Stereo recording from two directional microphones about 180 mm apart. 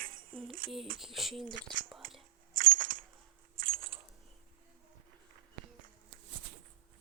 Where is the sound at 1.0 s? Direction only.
Centre (ahead or behind).